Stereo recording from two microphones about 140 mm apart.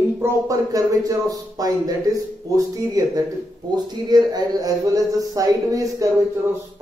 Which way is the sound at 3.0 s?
25° right (ahead or behind).